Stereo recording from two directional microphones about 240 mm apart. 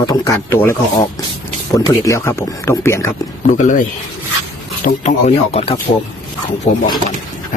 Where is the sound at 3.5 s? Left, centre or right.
Left.